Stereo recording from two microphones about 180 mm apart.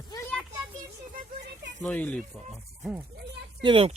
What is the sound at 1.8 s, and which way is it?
Speech, 10° left (ahead or behind).